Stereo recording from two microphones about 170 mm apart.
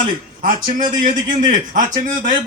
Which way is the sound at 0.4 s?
55° right (ahead or behind).